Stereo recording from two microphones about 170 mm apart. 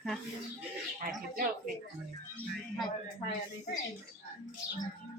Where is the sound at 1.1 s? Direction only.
55° right (ahead or behind).